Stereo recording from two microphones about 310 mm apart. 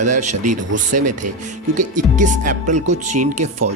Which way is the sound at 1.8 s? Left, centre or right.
Right.